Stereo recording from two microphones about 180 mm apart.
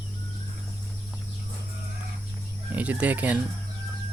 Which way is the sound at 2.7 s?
10° right (ahead or behind).